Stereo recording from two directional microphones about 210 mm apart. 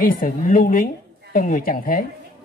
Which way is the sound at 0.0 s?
40° left (ahead or behind).